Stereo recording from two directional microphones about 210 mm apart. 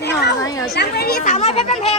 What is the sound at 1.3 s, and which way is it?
Speech, 30° left (ahead or behind).